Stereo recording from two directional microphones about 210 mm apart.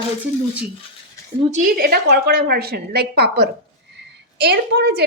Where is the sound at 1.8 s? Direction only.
45° right (ahead or behind).